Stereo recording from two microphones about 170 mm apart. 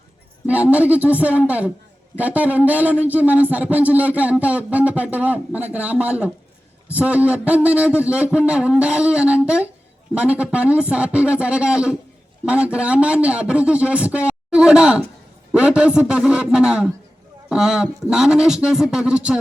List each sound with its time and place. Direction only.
0.4 s a man's voice: 10° right (ahead or behind)